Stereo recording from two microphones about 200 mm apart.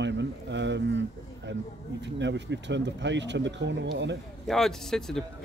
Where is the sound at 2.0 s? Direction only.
60° right (ahead or behind).